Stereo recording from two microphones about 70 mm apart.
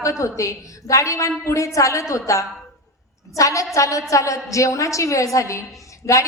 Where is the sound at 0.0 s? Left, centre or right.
Left.